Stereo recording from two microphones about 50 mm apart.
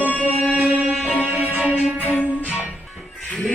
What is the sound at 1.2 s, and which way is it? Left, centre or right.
Music, right.